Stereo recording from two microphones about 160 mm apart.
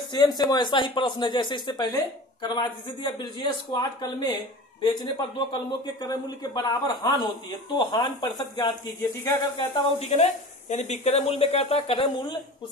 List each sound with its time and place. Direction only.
0.1 s a man's voice: 25° left (ahead or behind)
9.9 s speech: 40° left (ahead or behind)